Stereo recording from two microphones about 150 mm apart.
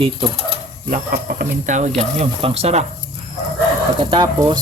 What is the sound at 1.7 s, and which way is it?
Speech, 50° right (ahead or behind).